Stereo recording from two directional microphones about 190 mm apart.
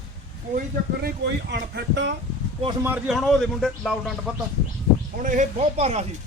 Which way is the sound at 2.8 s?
10° right (ahead or behind).